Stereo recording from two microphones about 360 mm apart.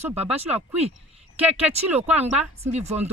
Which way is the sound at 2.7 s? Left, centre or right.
Centre.